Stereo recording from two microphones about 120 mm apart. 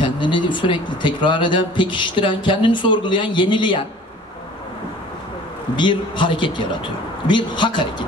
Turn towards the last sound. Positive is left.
turn(degrees=40)  # may be behind; listen again after turning